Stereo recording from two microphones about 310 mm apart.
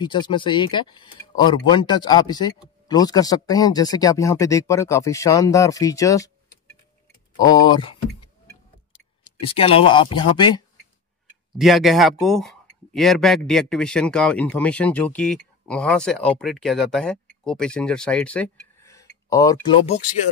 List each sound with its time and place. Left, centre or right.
0.0 s speech: centre
7.3 s speech: centre
9.5 s speech: centre
11.5 s speech: centre